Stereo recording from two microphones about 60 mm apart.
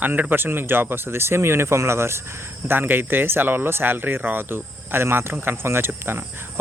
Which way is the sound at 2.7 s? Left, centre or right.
Right.